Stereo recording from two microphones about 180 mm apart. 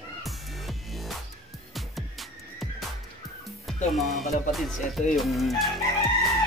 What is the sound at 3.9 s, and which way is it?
Speech, centre (ahead or behind).